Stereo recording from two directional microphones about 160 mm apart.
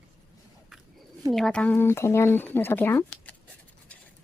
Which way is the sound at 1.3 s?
5° left (ahead or behind).